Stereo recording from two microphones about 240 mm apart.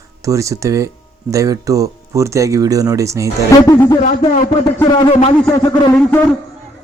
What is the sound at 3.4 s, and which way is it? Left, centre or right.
Speech, centre.